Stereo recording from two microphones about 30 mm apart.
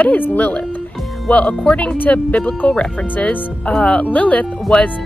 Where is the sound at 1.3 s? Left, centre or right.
Left.